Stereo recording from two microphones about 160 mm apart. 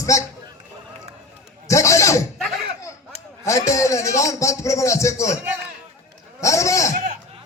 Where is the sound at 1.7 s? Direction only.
20° left (ahead or behind).